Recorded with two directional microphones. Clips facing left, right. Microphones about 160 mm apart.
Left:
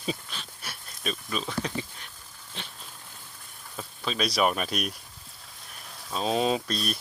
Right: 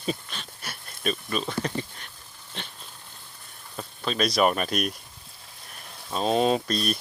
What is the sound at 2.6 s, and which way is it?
Speech, centre (ahead or behind).